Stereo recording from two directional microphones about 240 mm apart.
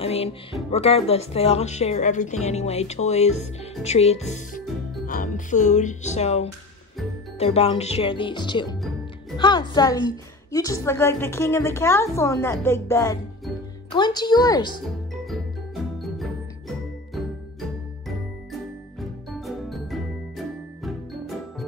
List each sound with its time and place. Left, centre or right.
0.0 s music: left
0.7 s a woman's voice: left
14.8 s music: centre